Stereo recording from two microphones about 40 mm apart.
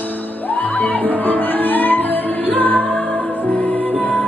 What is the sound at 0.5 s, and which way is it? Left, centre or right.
Music, left.